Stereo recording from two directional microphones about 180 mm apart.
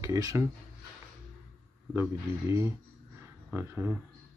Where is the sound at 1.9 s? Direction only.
15° right (ahead or behind).